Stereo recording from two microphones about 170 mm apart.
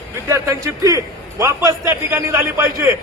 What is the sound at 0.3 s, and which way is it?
A man's voice, 20° right (ahead or behind).